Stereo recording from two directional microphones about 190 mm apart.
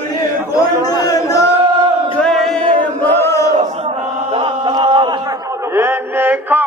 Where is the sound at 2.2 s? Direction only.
Centre (ahead or behind).